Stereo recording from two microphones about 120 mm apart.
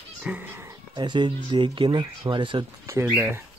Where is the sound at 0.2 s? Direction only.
15° right (ahead or behind).